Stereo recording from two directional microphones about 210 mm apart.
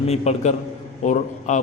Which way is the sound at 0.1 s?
30° left (ahead or behind).